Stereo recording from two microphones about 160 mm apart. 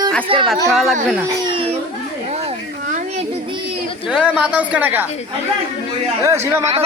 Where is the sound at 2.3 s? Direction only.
45° right (ahead or behind).